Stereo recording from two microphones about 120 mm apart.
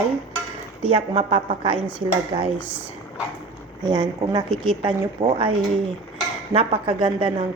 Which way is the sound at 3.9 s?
35° right (ahead or behind).